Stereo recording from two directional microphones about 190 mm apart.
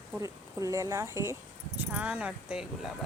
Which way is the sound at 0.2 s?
15° right (ahead or behind).